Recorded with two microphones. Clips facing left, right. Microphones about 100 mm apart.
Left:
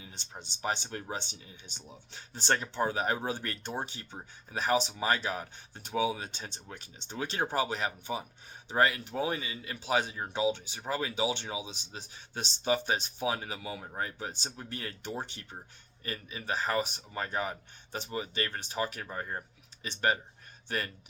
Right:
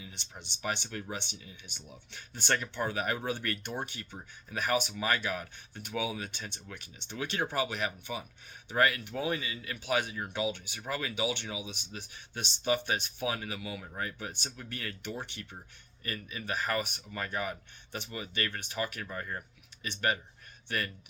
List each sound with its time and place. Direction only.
0.0 s speech: 40° left (ahead or behind)